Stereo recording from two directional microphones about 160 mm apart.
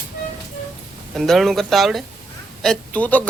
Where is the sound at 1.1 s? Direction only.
Centre (ahead or behind).